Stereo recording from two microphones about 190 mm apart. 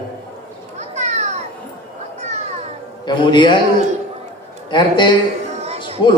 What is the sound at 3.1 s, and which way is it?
Speech, 25° left (ahead or behind).